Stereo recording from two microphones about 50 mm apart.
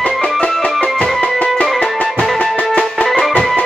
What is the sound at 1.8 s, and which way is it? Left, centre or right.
Music, left.